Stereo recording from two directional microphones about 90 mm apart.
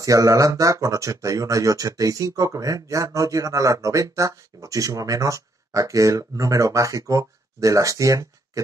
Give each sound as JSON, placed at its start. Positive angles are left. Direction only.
{"t": 0.0, "sound": "speech", "side_deg": -40}